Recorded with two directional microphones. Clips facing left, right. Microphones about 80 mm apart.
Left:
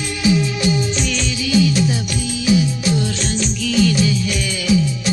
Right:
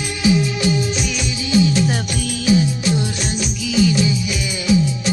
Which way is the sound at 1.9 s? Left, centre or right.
Right.